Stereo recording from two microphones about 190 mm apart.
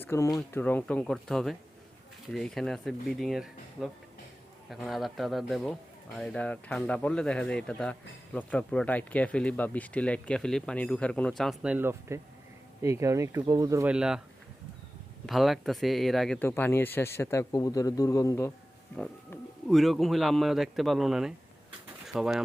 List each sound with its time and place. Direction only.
0.0 s speech: 15° left (ahead or behind); by 13.9 s 15° right (ahead or behind)
13.9 s speech: 5° right (ahead or behind)
15.3 s speech: centre (ahead or behind); by 18.5 s 15° left (ahead or behind)
18.9 s speech: centre (ahead or behind)